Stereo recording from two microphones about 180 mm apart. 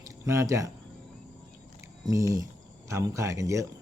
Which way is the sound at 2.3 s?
15° right (ahead or behind).